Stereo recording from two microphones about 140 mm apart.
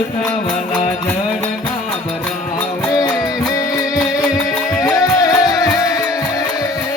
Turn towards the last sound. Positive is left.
turn(degrees=25)  # may be behind; listen again after turning